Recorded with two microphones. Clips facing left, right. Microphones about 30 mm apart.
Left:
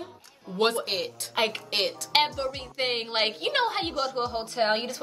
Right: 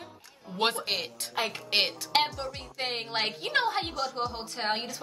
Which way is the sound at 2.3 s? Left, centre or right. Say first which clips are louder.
Left 5 dB; centre.